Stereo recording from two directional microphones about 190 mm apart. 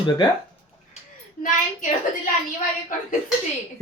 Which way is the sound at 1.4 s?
45° left (ahead or behind).